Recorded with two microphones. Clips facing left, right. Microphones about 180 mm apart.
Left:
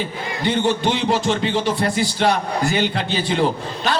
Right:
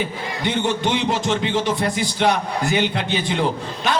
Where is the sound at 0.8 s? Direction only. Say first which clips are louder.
Left 1 dB; 20° right (ahead or behind).